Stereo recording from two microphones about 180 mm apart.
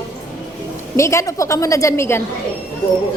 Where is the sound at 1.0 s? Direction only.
15° left (ahead or behind).